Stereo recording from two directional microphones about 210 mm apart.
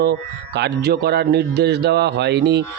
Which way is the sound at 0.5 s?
50° right (ahead or behind).